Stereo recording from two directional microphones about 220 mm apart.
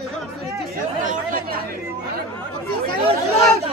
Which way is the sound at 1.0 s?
40° right (ahead or behind).